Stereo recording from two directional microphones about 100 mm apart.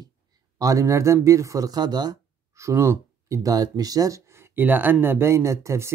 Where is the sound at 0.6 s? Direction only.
35° right (ahead or behind).